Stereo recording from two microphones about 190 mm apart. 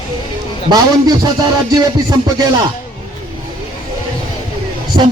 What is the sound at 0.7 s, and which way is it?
A man's voice, 20° right (ahead or behind).